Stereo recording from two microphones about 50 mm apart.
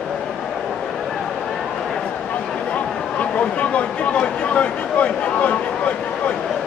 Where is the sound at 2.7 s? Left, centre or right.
Left.